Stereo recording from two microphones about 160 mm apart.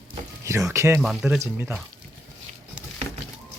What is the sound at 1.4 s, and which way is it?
Speech, 15° right (ahead or behind).